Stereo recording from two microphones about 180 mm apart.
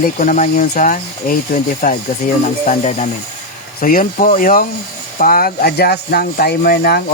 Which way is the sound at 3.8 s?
50° left (ahead or behind).